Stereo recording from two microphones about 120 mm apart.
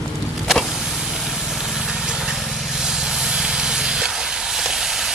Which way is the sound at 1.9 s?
5° right (ahead or behind).